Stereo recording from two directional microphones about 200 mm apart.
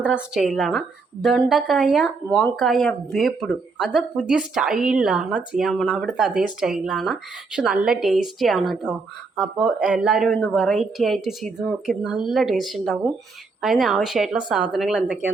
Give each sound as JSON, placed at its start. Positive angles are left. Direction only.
{"t": 0.0, "sound": "speech", "side_deg": -5}